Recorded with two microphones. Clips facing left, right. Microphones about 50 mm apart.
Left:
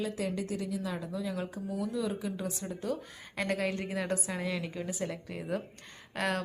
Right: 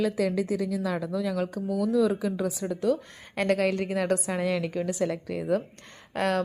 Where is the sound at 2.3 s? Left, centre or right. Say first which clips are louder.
Right 8 dB; right.